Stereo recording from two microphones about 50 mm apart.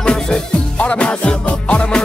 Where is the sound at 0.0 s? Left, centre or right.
Centre.